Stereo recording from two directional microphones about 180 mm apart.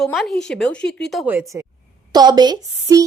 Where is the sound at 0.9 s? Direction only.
70° left (ahead or behind).